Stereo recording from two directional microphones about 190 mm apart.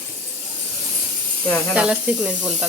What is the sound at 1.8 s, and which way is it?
Speech, 5° right (ahead or behind).